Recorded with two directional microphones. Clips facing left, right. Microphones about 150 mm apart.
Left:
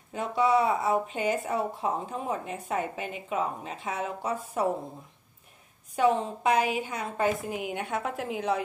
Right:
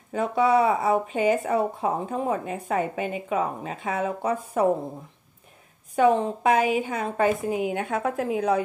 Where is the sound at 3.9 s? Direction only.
50° right (ahead or behind).